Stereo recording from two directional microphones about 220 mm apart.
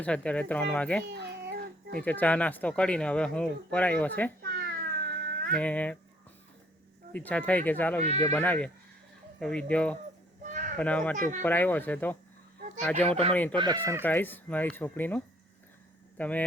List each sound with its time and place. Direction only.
0.0 s speech: 5° left (ahead or behind)
1.0 s cat: 50° right (ahead or behind)
2.0 s speech: 5° left (ahead or behind)
4.5 s cat: 45° right (ahead or behind)
5.5 s speech: 5° left (ahead or behind)
7.1 s speech: 5° left (ahead or behind)
10.4 s a sound: 35° right (ahead or behind)
10.8 s speech: 5° left (ahead or behind)
13.5 s speech: 20° right (ahead or behind)
14.0 s speech: 10° left (ahead or behind)